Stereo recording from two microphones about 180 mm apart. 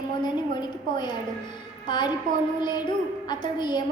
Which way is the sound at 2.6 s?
25° left (ahead or behind).